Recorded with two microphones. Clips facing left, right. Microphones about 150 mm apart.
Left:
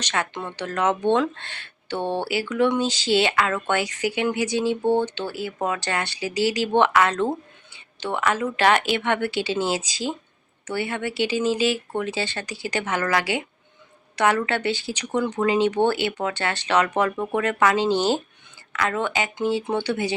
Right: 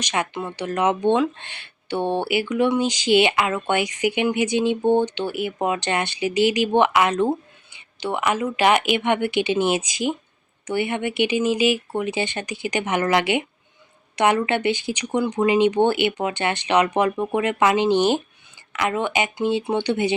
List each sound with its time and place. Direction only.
0.0 s speech: 15° right (ahead or behind)